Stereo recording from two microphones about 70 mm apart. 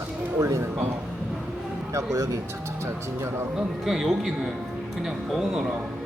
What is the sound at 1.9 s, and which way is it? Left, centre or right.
Speech, right.